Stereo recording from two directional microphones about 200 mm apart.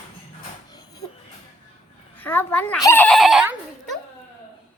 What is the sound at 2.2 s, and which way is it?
Speech, 10° left (ahead or behind).